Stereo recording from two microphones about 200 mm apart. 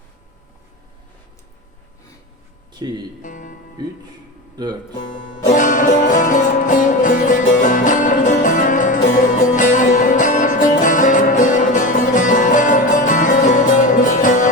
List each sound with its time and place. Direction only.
2.7 s speech: 20° right (ahead or behind)
3.2 s music: 40° left (ahead or behind)
5.5 s music: 40° left (ahead or behind)